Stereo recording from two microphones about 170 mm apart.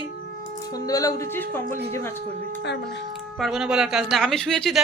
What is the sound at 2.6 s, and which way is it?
Speech, 90° left.